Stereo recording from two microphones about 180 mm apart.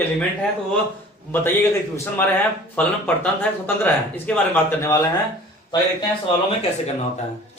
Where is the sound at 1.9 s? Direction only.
15° left (ahead or behind).